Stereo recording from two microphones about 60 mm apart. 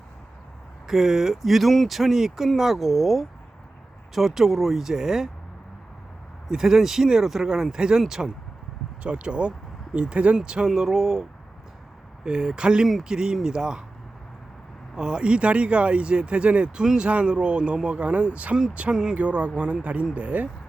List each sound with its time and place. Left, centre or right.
0.9 s speech: centre
6.5 s speech: centre
14.9 s speech: centre